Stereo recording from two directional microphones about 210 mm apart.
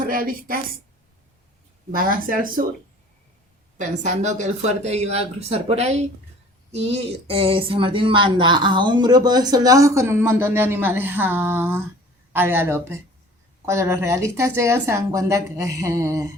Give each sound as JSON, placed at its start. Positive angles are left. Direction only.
{"t": 0.0, "sound": "a woman's voice", "side_deg": -40}
{"t": 1.9, "sound": "speech", "side_deg": -40}
{"t": 3.8, "sound": "speech", "side_deg": -35}